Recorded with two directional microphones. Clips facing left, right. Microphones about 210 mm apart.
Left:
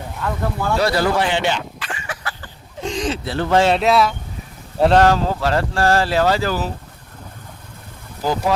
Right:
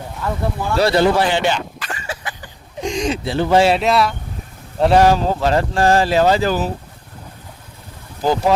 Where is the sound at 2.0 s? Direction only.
15° right (ahead or behind); by 4.1 s centre (ahead or behind).